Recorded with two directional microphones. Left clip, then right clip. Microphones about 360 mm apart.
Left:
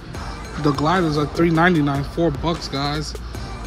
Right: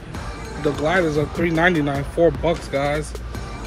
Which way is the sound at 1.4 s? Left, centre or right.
Centre.